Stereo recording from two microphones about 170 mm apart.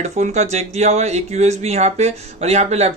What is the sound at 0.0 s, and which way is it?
Speech, 40° right (ahead or behind).